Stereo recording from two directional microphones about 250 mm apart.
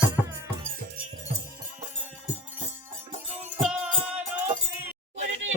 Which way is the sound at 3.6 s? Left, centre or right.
Centre.